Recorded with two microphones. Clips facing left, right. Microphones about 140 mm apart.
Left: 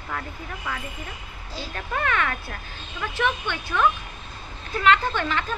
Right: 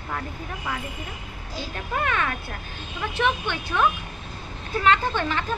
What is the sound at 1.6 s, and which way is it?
Speech, 20° right (ahead or behind).